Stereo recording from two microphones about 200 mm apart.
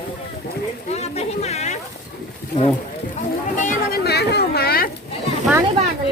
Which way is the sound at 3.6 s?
45° left (ahead or behind).